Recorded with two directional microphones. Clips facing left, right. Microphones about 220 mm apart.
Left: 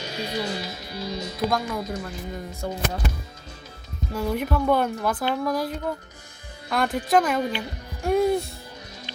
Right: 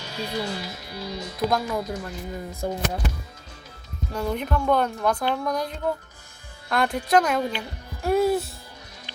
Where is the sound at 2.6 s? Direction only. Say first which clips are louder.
Right 3 dB; 15° right (ahead or behind).